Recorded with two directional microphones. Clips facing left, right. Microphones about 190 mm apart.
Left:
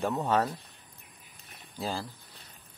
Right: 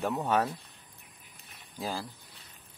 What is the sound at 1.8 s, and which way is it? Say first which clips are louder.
Speech: left 1 dB; 10° right (ahead or behind).